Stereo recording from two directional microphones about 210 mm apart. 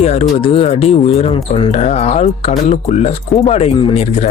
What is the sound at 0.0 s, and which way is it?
Speech, 30° left (ahead or behind).